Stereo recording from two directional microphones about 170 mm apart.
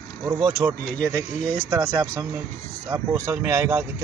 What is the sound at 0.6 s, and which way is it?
Speech, 15° right (ahead or behind).